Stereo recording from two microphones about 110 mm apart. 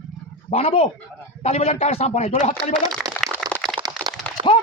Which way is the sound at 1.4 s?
80° left.